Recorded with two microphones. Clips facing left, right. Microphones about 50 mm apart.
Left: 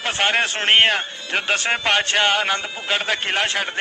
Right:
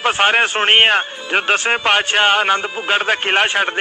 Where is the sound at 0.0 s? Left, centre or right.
Centre.